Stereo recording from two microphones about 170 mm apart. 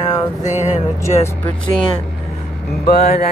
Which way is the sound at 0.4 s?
45° left (ahead or behind).